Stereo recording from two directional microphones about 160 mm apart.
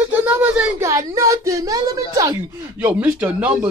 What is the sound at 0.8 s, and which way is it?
A woman's voice, 20° right (ahead or behind).